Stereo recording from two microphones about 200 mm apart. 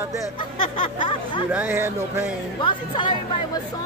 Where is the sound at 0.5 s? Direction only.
25° left (ahead or behind).